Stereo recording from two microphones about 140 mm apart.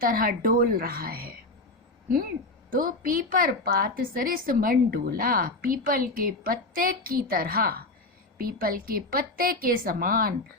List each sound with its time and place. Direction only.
0.0 s a woman's voice: 90° right
2.6 s a woman's voice: 90° right